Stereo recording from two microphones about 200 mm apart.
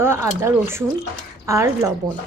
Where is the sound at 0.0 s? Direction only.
15° right (ahead or behind).